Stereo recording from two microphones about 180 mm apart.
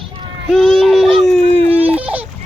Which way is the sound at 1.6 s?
35° right (ahead or behind).